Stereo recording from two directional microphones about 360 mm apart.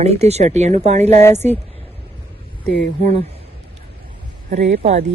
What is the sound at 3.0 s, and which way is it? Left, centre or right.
Speech, centre.